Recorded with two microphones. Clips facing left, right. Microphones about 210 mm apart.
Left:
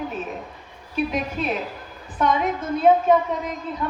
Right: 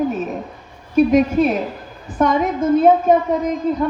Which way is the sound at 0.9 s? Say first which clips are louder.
Right 12 dB; 45° right (ahead or behind).